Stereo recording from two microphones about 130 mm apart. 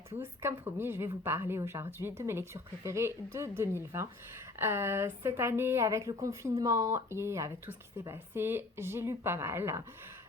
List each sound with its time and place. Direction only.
0.2 s a woman's voice: 15° right (ahead or behind)